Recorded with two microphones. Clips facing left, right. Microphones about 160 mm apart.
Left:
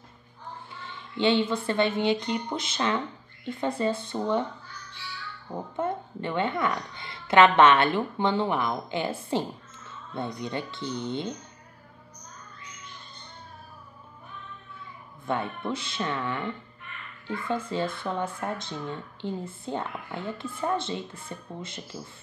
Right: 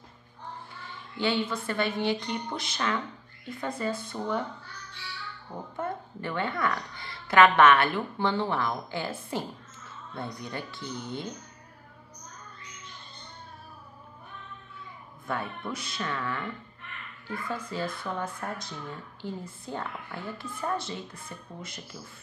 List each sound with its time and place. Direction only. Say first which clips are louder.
1.1 s speech: left 5 dB; 25° left (ahead or behind)
5.8 s speech: left 4 dB; 20° left (ahead or behind)
15.2 s speech: left 4 dB; 25° left (ahead or behind)